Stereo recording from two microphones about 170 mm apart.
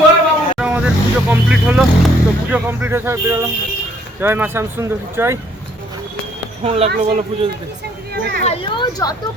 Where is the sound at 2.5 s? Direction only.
10° right (ahead or behind).